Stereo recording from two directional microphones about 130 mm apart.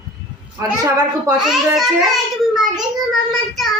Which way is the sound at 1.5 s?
Centre (ahead or behind).